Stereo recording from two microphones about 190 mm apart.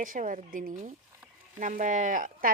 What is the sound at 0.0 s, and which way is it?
A woman's voice, 45° right (ahead or behind).